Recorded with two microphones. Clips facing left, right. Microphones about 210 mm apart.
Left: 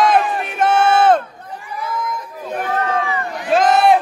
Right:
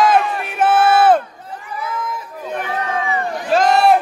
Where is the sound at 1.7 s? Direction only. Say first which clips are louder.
Left 1 dB; 5° right (ahead or behind).